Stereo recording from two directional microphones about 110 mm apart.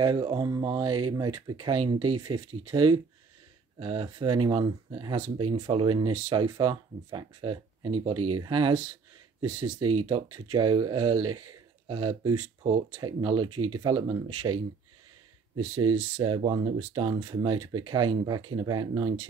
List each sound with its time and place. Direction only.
0.0 s speech: 50° right (ahead or behind)
15.7 s speech: 45° right (ahead or behind)